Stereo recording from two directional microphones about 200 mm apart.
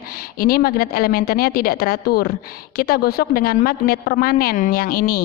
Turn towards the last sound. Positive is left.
turn(degrees=45)  # may be behind; listen again after turning